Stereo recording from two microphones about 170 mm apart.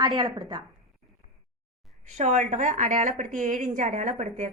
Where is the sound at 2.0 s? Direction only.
45° right (ahead or behind).